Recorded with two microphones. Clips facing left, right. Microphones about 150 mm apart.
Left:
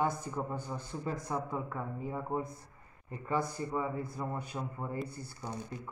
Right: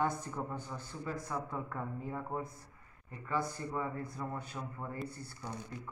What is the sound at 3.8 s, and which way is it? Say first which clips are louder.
Speech: left 3 dB; 5° left (ahead or behind).